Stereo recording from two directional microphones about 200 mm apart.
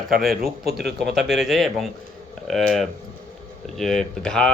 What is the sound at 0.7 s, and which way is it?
Speech, 55° right (ahead or behind).